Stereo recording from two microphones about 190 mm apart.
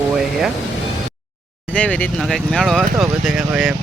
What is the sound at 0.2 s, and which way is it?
Music, centre (ahead or behind).